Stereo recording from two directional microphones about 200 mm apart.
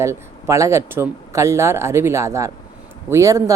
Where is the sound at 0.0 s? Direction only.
15° right (ahead or behind).